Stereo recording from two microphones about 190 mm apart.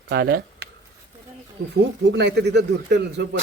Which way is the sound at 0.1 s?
60° right (ahead or behind).